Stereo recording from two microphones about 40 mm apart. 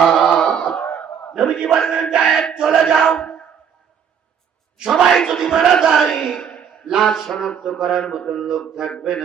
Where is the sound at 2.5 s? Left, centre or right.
Centre.